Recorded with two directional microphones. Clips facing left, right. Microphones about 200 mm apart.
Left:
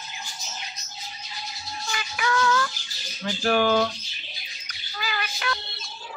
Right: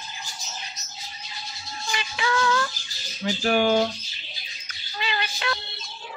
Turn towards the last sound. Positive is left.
turn(degrees=-25)  # may be behind; listen again after turning